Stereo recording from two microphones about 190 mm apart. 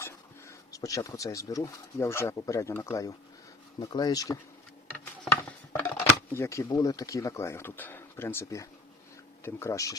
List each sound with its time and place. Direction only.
0.0 s speech: 15° left (ahead or behind)
5.2 s a sound: 10° left (ahead or behind)
6.3 s speech: 15° left (ahead or behind)